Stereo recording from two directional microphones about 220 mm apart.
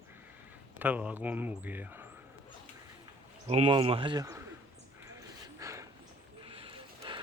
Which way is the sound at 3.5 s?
25° right (ahead or behind).